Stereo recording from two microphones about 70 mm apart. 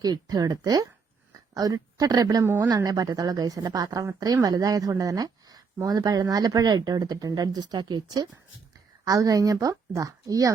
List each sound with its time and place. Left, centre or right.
0.0 s a woman's voice: right
9.0 s a woman's voice: right